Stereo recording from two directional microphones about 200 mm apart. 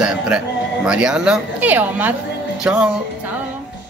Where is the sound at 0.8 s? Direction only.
5° right (ahead or behind).